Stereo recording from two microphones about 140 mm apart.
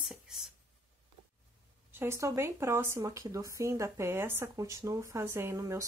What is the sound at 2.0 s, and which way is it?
Speech, 20° right (ahead or behind).